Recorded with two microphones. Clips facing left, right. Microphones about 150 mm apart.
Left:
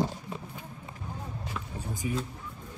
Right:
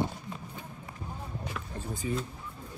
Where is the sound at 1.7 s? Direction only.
10° left (ahead or behind).